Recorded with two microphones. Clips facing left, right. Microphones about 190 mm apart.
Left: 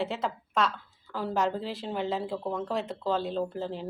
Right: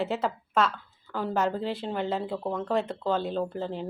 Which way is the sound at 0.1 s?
5° right (ahead or behind).